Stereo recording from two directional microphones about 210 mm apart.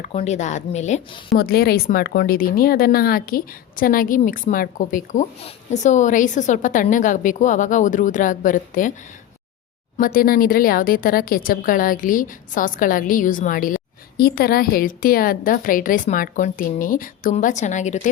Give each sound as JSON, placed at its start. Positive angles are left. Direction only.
{"t": 0.0, "sound": "speech", "side_deg": 30}
{"t": 1.3, "sound": "speech", "side_deg": 45}
{"t": 10.0, "sound": "speech", "side_deg": 45}